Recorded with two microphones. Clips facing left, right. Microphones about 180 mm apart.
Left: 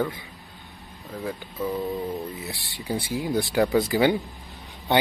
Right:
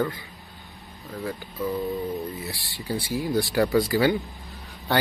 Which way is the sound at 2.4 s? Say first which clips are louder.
Even; 20° left (ahead or behind).